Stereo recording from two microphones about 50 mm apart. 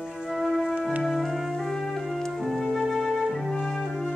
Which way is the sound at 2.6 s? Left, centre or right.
Centre.